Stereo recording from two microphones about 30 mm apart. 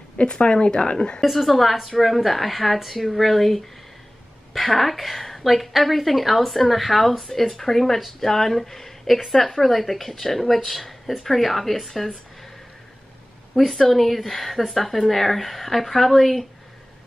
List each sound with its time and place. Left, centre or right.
0.2 s speech: left
1.3 s a woman's voice: centre
13.6 s a woman's voice: centre